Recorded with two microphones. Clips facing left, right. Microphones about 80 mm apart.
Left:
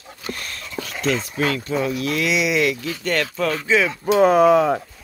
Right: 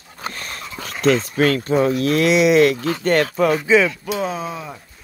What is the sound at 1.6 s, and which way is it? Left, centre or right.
Speech, right.